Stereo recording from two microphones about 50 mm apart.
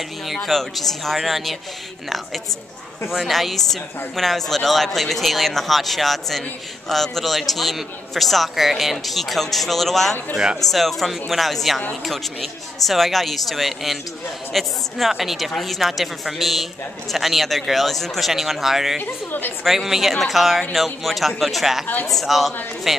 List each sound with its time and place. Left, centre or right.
0.4 s speech: centre
18.9 s a woman's voice: left
19.6 s speech: centre